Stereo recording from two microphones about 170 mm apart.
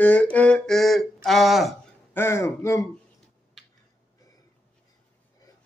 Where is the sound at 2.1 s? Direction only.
15° left (ahead or behind).